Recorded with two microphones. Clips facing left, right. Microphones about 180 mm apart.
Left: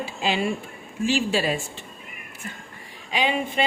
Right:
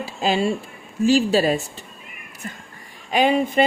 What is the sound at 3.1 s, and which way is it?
Speech, 45° right (ahead or behind).